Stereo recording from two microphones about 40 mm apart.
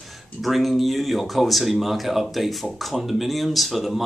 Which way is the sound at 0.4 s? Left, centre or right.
Centre.